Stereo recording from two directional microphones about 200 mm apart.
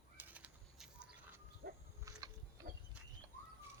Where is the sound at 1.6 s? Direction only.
50° right (ahead or behind).